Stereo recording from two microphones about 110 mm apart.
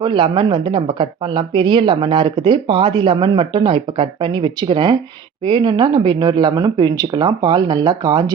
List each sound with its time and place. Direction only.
0.0 s speech: 45° right (ahead or behind)